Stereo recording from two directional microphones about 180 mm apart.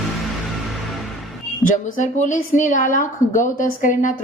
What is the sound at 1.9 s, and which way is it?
A woman's voice, 45° left (ahead or behind).